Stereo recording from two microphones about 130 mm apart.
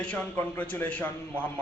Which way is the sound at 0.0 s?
10° left (ahead or behind).